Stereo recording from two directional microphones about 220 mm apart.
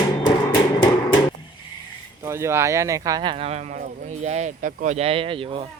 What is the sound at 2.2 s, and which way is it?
Speech, 15° right (ahead or behind).